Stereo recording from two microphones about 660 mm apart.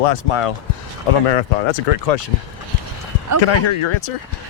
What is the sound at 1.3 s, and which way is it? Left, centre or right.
Speech, left.